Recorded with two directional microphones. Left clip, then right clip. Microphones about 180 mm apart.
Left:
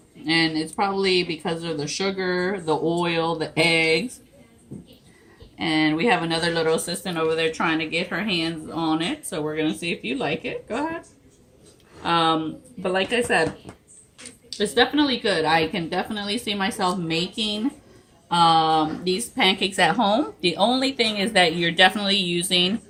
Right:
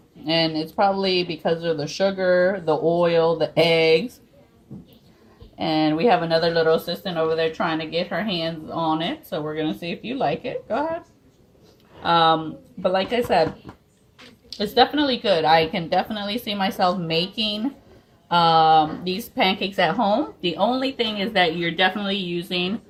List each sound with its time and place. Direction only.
0.3 s speech: 35° right (ahead or behind)
5.5 s speech: 35° right (ahead or behind)
12.8 s a woman's voice: 45° right (ahead or behind)
14.6 s speech: 40° right (ahead or behind); by 19.7 s 20° right (ahead or behind)
19.7 s speech: centre (ahead or behind)
20.1 s a woman's voice: 20° left (ahead or behind)
21.6 s speech: 45° left (ahead or behind)